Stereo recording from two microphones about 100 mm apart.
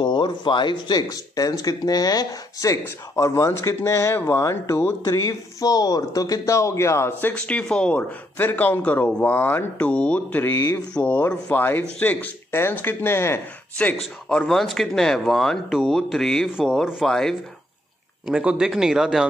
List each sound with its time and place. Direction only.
0.0 s speech: 50° left (ahead or behind); by 4.9 s 25° left (ahead or behind)
5.0 s speech: 35° left (ahead or behind)
14.3 s speech: 5° left (ahead or behind)
18.2 s speech: 10° right (ahead or behind)